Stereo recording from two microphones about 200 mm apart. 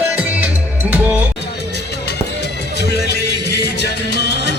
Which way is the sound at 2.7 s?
55° left (ahead or behind).